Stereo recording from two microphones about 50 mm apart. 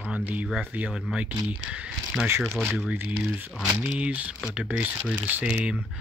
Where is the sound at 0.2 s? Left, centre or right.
Right.